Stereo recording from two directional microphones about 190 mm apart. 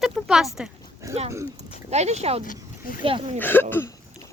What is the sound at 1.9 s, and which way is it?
Speech, 35° right (ahead or behind).